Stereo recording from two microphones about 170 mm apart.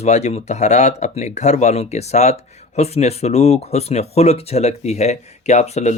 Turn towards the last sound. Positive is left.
turn(degrees=40)  # may be behind; listen again after turning